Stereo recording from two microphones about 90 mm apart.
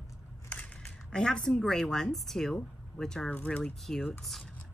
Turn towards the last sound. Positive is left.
turn(degrees=5)  # may be behind; listen again after turning